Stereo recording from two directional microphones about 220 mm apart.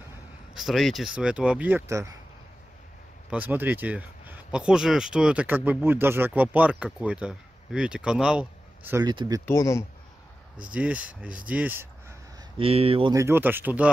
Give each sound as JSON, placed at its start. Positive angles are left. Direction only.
{"t": 0.6, "sound": "speech", "side_deg": 0}
{"t": 3.3, "sound": "speech", "side_deg": -5}
{"t": 9.0, "sound": "speech", "side_deg": -20}
{"t": 9.5, "sound": "speech", "side_deg": 15}
{"t": 10.6, "sound": "speech", "side_deg": -5}
{"t": 11.4, "sound": "a sound", "side_deg": -5}
{"t": 12.5, "sound": "speech", "side_deg": -25}